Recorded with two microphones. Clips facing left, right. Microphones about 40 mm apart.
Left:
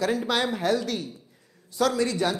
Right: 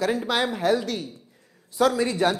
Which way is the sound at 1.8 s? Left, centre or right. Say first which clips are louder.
Right 3 dB; centre.